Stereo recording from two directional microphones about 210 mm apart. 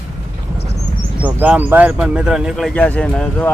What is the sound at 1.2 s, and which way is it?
Speech, 10° right (ahead or behind).